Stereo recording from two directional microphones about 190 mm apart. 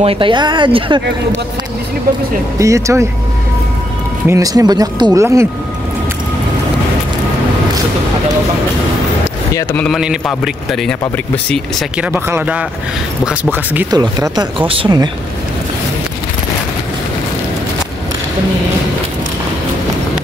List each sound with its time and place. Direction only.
0.0 s speech: 30° right (ahead or behind)
2.6 s speech: 15° right (ahead or behind)
4.3 s speech: 20° right (ahead or behind)
9.5 s speech: 15° left (ahead or behind)
9.9 s speech: 5° right (ahead or behind)
12.0 s speech: 10° right (ahead or behind)
13.9 s speech: 20° right (ahead or behind)